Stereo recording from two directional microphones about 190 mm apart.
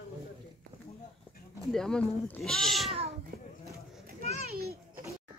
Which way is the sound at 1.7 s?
5° left (ahead or behind).